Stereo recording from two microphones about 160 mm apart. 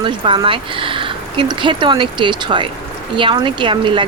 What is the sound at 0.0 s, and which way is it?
Speech, 30° right (ahead or behind).